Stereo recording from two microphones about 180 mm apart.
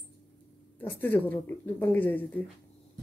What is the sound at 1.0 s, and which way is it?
A woman's voice, 10° left (ahead or behind).